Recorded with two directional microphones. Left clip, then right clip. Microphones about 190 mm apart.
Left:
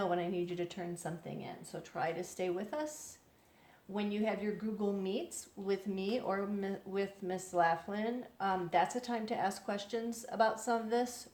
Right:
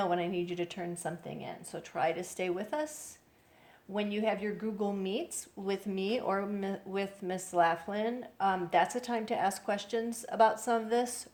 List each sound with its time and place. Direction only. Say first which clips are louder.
0.0 s speech: right 3 dB; 35° right (ahead or behind)
3.9 s speech: right 4 dB; 35° right (ahead or behind)